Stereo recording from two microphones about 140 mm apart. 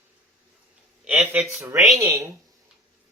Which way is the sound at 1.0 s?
10° right (ahead or behind).